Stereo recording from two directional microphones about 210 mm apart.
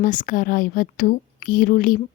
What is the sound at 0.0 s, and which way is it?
A woman's voice, 40° left (ahead or behind).